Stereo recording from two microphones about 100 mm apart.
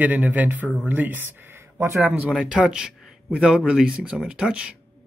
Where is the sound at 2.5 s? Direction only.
5° right (ahead or behind).